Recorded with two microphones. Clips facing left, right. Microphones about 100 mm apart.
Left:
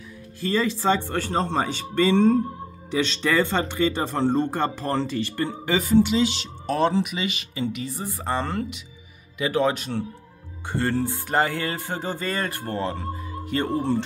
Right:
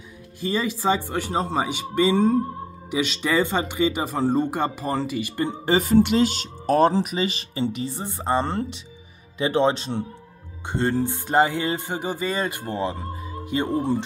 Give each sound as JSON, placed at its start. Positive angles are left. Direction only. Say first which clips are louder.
{"t": 0.4, "sound": "music", "louder": "left 1 dB", "side_deg": -15}
{"t": 5.7, "sound": "speech", "louder": "right 1 dB", "side_deg": -50}
{"t": 10.7, "sound": "music", "louder": "right 1 dB", "side_deg": -20}